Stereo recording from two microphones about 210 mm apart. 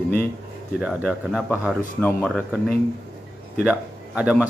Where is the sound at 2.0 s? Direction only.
5° left (ahead or behind).